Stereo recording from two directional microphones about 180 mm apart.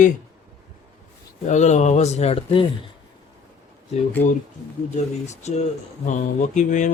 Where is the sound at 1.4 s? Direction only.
40° left (ahead or behind).